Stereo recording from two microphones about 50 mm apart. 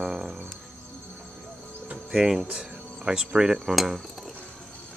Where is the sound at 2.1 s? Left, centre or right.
Centre.